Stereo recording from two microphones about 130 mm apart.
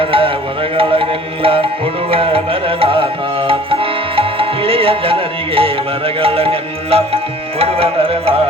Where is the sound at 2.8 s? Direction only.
45° right (ahead or behind).